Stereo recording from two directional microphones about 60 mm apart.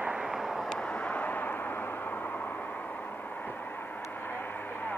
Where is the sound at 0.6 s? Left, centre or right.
Centre.